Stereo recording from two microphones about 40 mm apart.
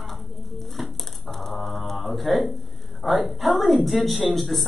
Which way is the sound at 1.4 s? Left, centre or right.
Centre.